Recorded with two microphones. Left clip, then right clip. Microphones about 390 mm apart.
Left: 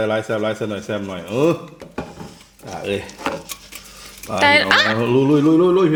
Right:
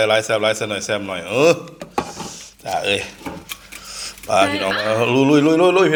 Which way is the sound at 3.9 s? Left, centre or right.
Right.